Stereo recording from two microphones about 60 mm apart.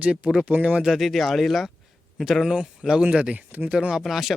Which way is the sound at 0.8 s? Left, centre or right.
Centre.